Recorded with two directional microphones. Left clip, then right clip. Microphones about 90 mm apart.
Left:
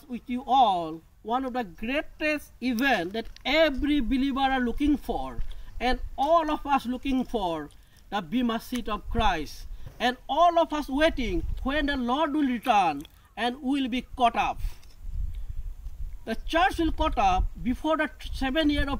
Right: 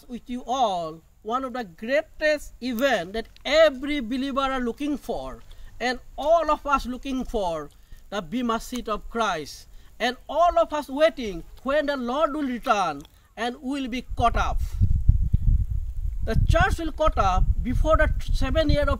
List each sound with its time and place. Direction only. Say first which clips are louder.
0.1 s speech: left 4 dB; 45° right (ahead or behind); by 14.5 s 30° right (ahead or behind)
16.3 s speech: right 1 dB; 25° right (ahead or behind)